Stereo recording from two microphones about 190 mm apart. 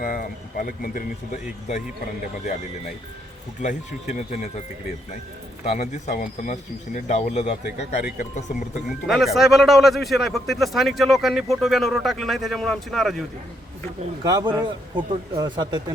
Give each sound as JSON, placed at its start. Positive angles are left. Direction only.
{"t": 0.0, "sound": "speech", "side_deg": 45}
{"t": 3.6, "sound": "speech", "side_deg": 40}
{"t": 5.6, "sound": "speech", "side_deg": 35}
{"t": 9.0, "sound": "speech", "side_deg": 0}
{"t": 14.3, "sound": "speech", "side_deg": -20}